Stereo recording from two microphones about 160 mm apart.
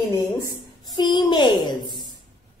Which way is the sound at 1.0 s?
30° left (ahead or behind).